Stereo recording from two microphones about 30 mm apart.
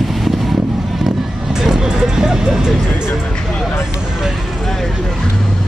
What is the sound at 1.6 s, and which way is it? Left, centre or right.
Vehicle, centre.